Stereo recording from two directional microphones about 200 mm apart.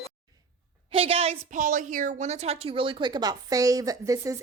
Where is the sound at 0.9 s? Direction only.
30° right (ahead or behind).